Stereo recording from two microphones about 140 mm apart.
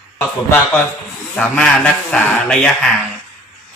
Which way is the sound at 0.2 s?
15° left (ahead or behind).